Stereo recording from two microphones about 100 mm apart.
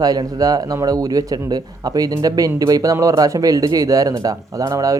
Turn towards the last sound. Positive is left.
turn(degrees=-35)  # may be behind; listen again after turning